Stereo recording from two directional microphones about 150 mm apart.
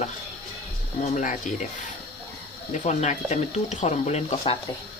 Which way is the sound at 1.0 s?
55° left (ahead or behind).